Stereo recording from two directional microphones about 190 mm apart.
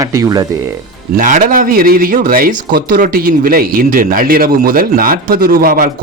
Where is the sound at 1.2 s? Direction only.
45° right (ahead or behind).